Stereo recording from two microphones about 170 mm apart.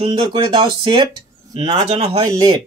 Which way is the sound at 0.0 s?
30° right (ahead or behind).